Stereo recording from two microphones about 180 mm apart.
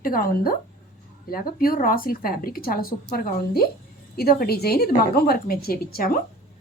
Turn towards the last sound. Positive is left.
turn(degrees=55)  # may be behind; listen again after turning